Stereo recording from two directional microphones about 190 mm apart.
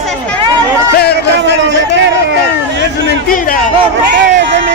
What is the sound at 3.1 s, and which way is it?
Chatter, 50° left (ahead or behind).